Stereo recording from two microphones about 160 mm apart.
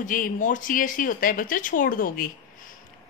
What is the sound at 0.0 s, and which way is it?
A woman's voice, 55° left (ahead or behind).